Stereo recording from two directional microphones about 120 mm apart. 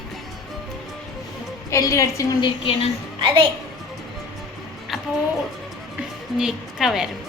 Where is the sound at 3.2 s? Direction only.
40° right (ahead or behind).